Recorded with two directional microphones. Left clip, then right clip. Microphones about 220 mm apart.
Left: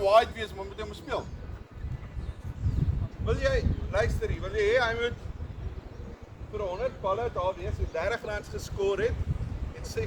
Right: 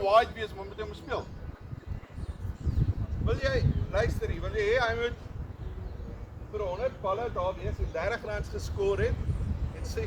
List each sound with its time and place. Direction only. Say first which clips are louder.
0.0 s speech: left 2 dB; 50° left (ahead or behind)
3.2 s speech: left 2 dB; 20° left (ahead or behind)
6.6 s speech: even; 25° left (ahead or behind)